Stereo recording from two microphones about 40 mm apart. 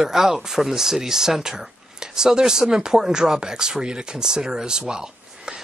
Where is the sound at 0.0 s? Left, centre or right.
Centre.